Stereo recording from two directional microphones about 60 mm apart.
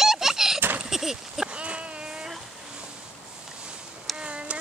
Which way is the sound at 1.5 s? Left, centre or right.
Centre.